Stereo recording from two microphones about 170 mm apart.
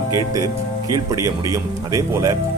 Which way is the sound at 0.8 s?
20° right (ahead or behind).